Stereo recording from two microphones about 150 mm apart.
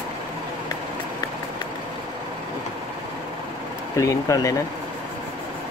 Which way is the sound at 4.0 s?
20° left (ahead or behind).